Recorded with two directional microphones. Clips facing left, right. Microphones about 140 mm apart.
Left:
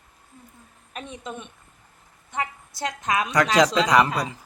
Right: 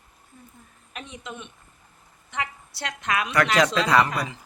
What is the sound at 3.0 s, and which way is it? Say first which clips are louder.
Speech: left 1 dB; 20° left (ahead or behind).